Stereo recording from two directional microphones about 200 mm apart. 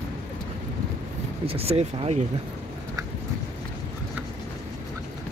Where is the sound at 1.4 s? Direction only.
30° right (ahead or behind).